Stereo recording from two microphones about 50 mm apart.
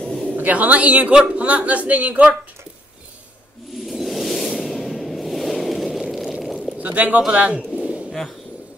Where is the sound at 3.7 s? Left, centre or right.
Centre.